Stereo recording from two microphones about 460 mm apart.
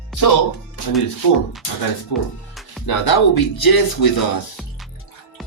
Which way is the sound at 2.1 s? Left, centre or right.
Left.